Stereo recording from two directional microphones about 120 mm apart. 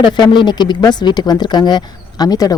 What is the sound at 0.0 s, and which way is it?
Speech, 40° left (ahead or behind).